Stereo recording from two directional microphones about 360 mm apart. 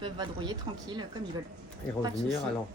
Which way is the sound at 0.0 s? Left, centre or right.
Centre.